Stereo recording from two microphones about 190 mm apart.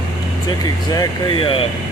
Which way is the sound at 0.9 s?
25° left (ahead or behind).